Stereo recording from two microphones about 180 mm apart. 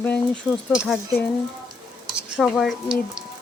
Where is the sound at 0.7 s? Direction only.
5° right (ahead or behind).